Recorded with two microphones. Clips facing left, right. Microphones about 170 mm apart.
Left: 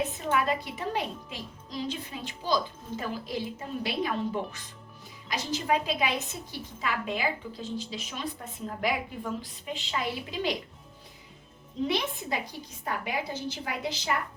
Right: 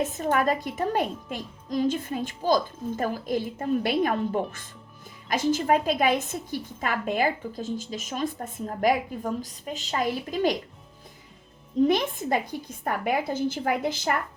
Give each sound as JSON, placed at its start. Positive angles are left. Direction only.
{"t": 0.2, "sound": "speech", "side_deg": -45}
{"t": 11.9, "sound": "speech", "side_deg": -50}